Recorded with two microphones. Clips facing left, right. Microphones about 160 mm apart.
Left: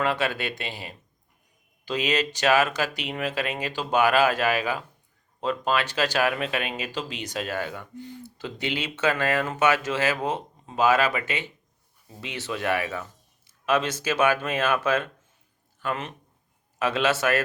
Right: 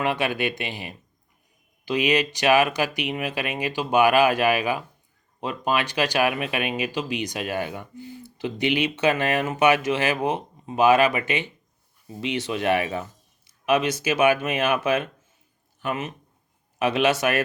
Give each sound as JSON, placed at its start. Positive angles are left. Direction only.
{"t": 0.0, "sound": "a man's voice", "side_deg": -15}